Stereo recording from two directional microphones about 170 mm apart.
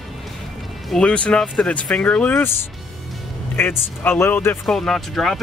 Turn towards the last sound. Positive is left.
turn(degrees=0)  # may be behind; listen again after turning